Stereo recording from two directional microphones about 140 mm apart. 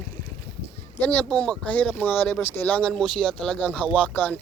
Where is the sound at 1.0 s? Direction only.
10° left (ahead or behind).